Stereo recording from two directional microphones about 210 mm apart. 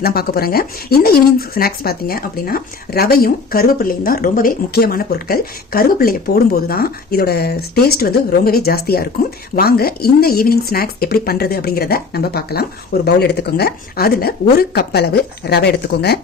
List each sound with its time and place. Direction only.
0.0 s speech: 45° left (ahead or behind)